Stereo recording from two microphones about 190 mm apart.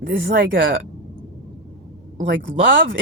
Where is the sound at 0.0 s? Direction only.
50° right (ahead or behind).